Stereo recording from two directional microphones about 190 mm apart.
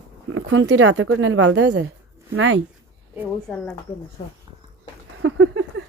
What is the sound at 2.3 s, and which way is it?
Speech, 90° right.